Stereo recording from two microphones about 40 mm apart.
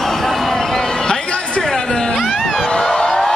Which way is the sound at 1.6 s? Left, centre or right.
Centre.